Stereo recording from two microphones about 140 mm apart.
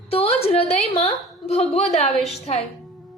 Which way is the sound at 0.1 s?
45° left (ahead or behind).